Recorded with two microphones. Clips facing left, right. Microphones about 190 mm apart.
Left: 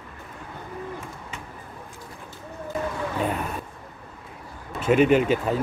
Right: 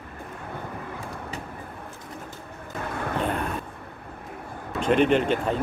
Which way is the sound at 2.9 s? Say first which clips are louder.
Left 1 dB; 60° right (ahead or behind).